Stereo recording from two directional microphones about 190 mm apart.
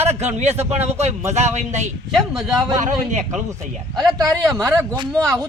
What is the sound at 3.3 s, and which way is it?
Speech, 15° right (ahead or behind).